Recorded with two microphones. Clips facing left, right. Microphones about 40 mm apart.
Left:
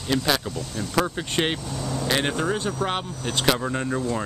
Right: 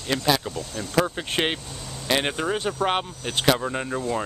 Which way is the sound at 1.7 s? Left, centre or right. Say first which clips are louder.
Left 9 dB; left.